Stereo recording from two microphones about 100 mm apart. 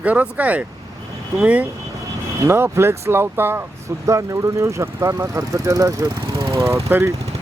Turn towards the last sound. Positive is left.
turn(degrees=-25)  # may be behind; listen again after turning